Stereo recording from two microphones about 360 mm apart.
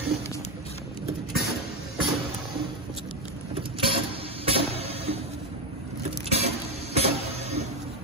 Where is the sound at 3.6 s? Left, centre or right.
Centre.